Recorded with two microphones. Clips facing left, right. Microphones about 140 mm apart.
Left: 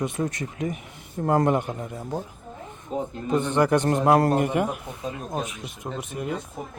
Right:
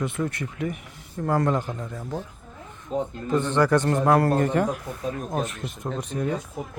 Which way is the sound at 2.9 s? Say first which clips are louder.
Even; 5° left (ahead or behind).